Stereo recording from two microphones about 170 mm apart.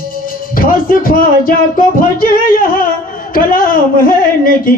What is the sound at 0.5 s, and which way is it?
Music, 55° left (ahead or behind).